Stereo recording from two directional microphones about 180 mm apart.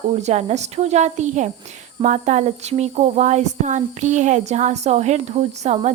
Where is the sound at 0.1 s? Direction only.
40° right (ahead or behind).